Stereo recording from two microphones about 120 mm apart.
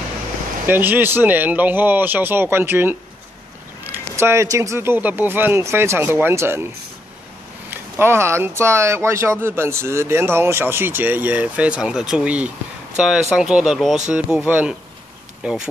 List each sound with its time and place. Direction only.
0.7 s speech: 15° right (ahead or behind)
7.7 s speech: 20° right (ahead or behind)